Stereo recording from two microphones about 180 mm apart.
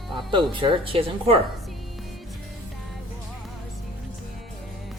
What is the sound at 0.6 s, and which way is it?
Speech, 30° right (ahead or behind).